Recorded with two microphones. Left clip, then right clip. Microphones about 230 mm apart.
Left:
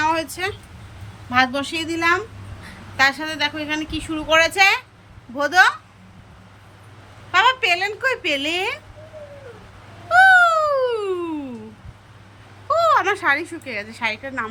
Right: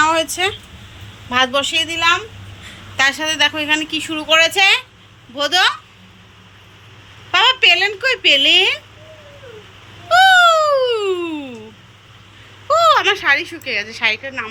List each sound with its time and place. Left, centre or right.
0.0 s a sound: centre
1.3 s speech: centre
3.0 s speech: centre
7.3 s speech: centre
10.1 s cat: centre
12.6 s speech: centre